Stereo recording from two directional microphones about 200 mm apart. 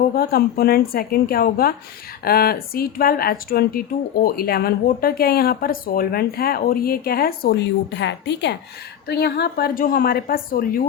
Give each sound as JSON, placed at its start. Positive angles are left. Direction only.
{"t": 0.1, "sound": "speech", "side_deg": 50}